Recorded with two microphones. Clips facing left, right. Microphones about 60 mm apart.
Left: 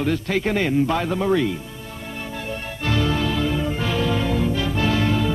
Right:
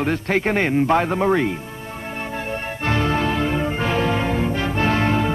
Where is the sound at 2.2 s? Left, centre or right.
Right.